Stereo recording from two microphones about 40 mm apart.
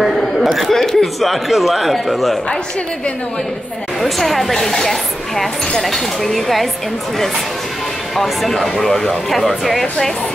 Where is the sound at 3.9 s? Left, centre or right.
Centre.